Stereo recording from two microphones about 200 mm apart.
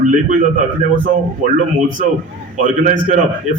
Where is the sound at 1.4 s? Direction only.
40° right (ahead or behind).